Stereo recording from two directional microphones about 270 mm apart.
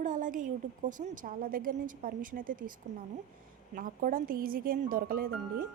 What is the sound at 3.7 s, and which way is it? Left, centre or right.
Speech, right.